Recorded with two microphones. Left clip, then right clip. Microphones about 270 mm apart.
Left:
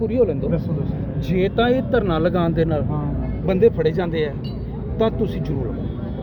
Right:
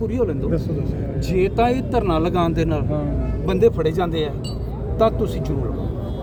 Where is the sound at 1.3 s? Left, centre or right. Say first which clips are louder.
Even; centre; by 4.3 s right.